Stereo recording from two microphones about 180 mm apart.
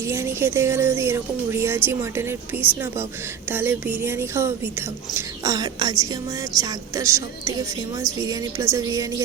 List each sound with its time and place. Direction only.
0.0 s speech: 15° right (ahead or behind)